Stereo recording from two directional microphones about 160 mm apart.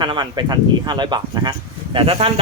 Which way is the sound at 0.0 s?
30° right (ahead or behind).